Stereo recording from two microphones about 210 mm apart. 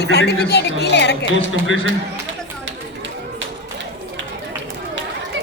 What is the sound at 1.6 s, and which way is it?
Speech, 70° right (ahead or behind).